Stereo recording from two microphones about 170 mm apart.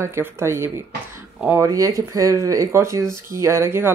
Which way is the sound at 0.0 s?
15° right (ahead or behind).